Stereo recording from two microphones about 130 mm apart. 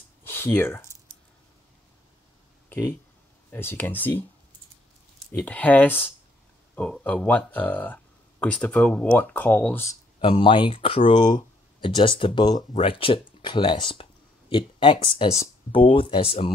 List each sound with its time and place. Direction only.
0.2 s a sound: 15° left (ahead or behind)
3.5 s speech: 15° left (ahead or behind)
5.4 s speech: 10° left (ahead or behind)
10.2 s speech: 40° left (ahead or behind)
12.7 s speech: 45° left (ahead or behind)